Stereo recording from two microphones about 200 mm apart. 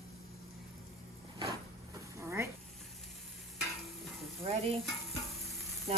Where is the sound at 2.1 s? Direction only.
15° right (ahead or behind).